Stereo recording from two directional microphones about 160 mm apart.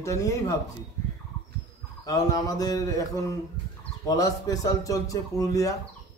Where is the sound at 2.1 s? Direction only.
20° left (ahead or behind).